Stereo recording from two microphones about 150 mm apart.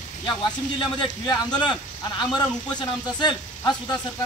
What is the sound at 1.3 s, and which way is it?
Speech, 30° left (ahead or behind).